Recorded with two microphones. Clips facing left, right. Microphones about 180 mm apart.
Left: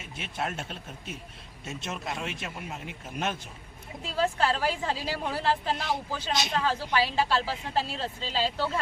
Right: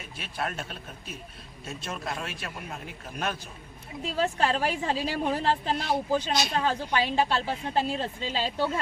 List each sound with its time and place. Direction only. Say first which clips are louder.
0.0 s a man's voice: even; 20° left (ahead or behind)
4.0 s speech: even; 20° right (ahead or behind)